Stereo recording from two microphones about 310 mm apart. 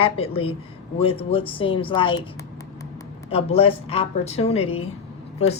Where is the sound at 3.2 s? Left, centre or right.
Centre.